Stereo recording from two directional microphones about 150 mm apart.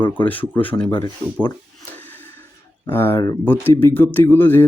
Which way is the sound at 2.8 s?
15° left (ahead or behind).